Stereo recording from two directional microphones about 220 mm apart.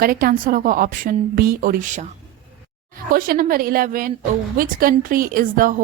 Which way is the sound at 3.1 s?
40° right (ahead or behind).